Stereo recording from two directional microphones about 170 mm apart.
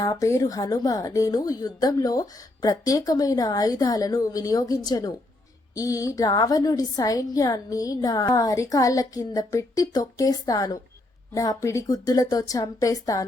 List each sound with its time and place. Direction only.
0.0 s a woman's voice: 20° left (ahead or behind)